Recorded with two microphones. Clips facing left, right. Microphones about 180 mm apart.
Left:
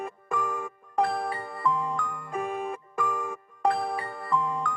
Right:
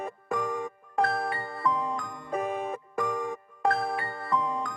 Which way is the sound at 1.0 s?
Centre (ahead or behind).